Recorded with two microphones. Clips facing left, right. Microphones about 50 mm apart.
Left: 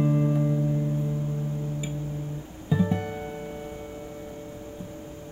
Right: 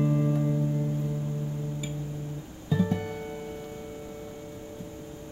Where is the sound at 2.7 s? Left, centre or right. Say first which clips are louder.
Left 2 dB; centre.